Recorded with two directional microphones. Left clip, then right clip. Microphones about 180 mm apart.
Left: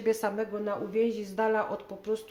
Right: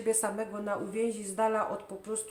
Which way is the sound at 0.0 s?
30° left (ahead or behind).